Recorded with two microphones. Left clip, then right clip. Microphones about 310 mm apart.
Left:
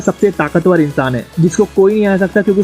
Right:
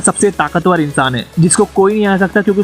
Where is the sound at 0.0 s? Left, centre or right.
Right.